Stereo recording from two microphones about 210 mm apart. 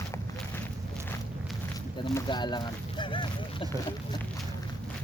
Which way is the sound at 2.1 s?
20° left (ahead or behind).